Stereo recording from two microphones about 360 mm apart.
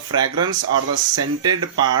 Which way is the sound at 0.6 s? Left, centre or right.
Right.